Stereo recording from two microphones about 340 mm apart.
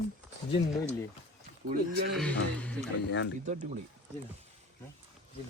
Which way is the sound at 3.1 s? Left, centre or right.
Left.